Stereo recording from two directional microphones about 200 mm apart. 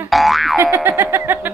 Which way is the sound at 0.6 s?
15° right (ahead or behind).